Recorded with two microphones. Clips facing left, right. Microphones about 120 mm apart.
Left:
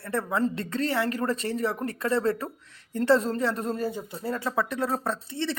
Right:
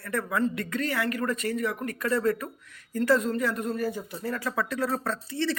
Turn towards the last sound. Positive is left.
turn(degrees=25)  # may be behind; listen again after turning